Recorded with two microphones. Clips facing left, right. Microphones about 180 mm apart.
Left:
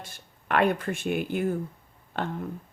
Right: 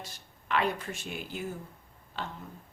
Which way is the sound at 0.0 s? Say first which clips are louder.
Left 1 dB; 55° left (ahead or behind).